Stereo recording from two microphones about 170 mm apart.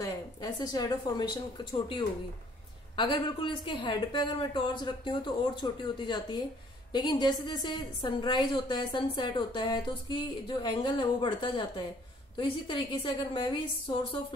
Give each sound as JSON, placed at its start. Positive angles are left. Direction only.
{"t": 0.0, "sound": "a woman's voice", "side_deg": 25}